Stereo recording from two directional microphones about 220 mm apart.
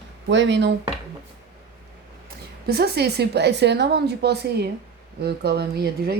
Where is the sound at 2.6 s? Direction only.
45° right (ahead or behind).